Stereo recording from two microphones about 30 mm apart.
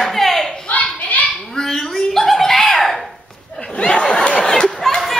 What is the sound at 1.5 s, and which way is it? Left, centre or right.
Dog, centre.